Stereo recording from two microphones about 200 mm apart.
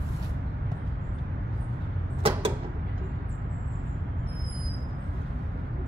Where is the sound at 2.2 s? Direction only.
25° right (ahead or behind).